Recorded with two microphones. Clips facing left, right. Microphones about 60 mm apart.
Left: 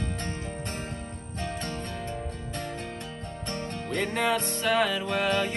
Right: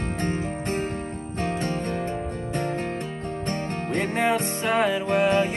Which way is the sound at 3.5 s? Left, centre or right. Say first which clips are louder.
Right 4 dB; right.